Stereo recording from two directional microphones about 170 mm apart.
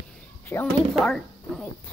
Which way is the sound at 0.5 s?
15° left (ahead or behind).